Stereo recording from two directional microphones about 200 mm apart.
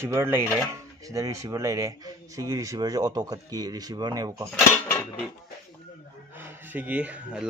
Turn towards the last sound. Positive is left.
turn(degrees=-5)  # may be behind; listen again after turning